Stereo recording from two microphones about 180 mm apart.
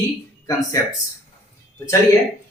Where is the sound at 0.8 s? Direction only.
15° left (ahead or behind).